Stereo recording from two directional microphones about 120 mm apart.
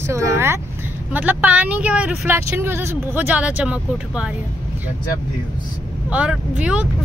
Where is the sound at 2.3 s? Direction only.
20° right (ahead or behind).